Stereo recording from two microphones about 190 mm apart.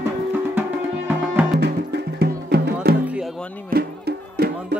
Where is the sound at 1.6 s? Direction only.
60° right (ahead or behind).